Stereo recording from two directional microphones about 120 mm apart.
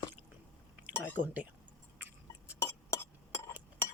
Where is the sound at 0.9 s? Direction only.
15° left (ahead or behind).